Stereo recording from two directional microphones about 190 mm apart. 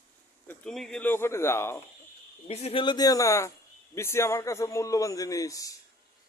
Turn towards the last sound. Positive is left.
turn(degrees=15)  # may be behind; listen again after turning